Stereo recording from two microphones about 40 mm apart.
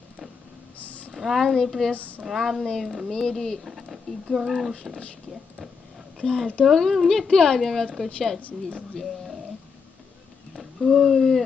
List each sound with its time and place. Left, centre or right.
0.8 s a sound: left
1.1 s speech: centre
1.9 s speech: left
2.2 s speech: centre
3.1 s speech: centre
3.6 s speech: centre
6.1 s speech: centre
10.5 s speech: centre